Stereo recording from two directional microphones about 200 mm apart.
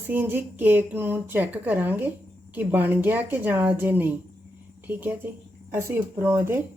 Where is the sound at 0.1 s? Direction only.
10° right (ahead or behind).